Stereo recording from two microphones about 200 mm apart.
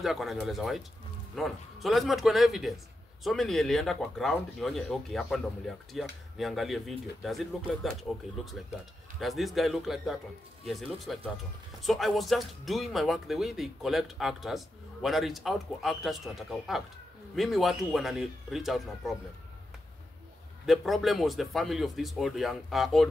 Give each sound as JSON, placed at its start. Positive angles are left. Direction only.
{"t": 0.0, "sound": "speech", "side_deg": 0}
{"t": 20.6, "sound": "speech", "side_deg": 0}